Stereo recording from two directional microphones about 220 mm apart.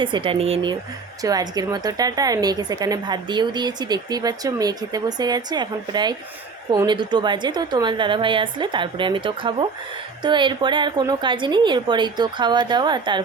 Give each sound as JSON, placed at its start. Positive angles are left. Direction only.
{"t": 0.0, "sound": "a woman's voice", "side_deg": -25}